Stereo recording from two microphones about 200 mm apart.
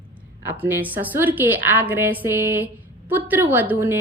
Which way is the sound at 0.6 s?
10° right (ahead or behind).